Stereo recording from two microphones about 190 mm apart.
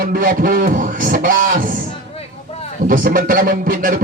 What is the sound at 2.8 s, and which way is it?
Music, 45° right (ahead or behind).